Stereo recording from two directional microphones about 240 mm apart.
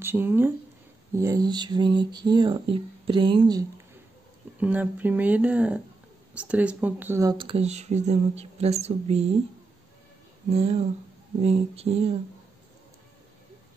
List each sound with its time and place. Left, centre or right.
0.0 s speech: centre
4.6 s speech: centre; by 9.3 s right
10.5 s speech: right